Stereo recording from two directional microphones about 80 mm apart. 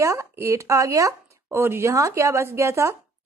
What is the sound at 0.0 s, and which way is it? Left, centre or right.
Speech, right.